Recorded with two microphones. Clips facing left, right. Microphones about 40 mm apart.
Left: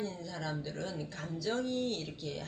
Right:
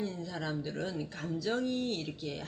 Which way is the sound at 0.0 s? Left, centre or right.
Centre.